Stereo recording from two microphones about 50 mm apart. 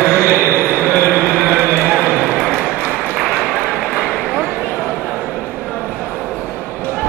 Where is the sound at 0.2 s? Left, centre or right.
Right.